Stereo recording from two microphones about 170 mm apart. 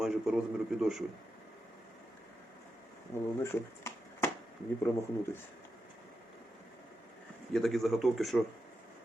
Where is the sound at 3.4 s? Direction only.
15° left (ahead or behind).